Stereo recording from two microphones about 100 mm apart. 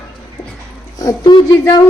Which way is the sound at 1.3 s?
45° left (ahead or behind).